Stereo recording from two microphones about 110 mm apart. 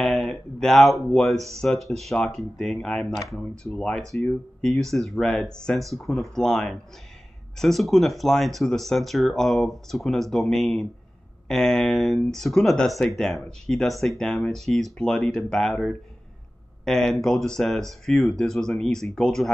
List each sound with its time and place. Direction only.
0.0 s speech: 5° left (ahead or behind)